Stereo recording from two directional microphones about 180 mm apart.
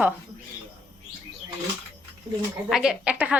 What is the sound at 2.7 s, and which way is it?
Speech, 5° right (ahead or behind).